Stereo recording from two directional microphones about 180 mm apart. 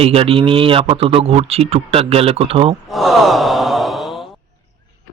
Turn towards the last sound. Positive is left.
turn(degrees=0)  # may be behind; listen again after turning